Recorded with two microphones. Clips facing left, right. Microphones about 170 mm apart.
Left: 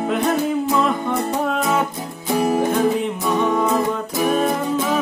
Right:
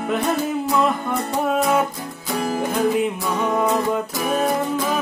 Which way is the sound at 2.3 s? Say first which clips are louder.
Left 5 dB; 20° left (ahead or behind).